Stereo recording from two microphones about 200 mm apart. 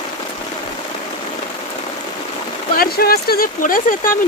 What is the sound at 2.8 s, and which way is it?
Speech, 50° left (ahead or behind).